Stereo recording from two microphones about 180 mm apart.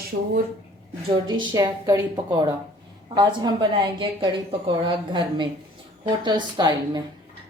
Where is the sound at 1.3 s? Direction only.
25° right (ahead or behind).